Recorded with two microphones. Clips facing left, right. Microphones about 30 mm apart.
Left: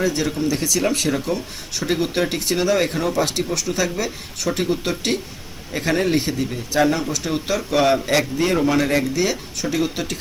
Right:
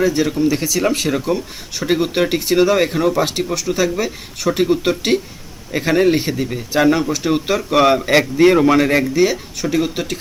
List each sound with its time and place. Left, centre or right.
0.0 s speech: centre
9.2 s speech: centre